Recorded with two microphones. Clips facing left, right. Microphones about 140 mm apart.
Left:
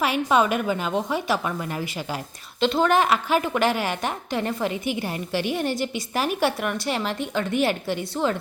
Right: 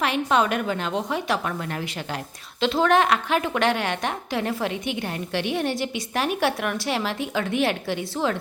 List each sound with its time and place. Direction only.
0.0 s a woman's voice: 5° left (ahead or behind)